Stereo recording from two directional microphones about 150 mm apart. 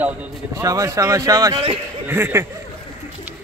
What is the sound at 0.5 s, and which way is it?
A man's voice, 20° right (ahead or behind).